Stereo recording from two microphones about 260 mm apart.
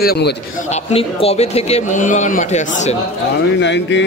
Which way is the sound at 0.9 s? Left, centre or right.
Left.